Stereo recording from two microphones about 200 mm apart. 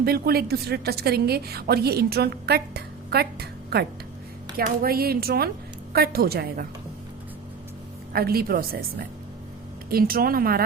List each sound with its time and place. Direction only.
0.0 s a woman's voice: 50° right (ahead or behind)
8.1 s a woman's voice: 50° right (ahead or behind)